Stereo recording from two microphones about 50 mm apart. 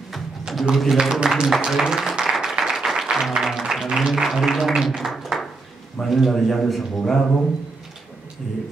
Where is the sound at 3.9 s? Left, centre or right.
Centre.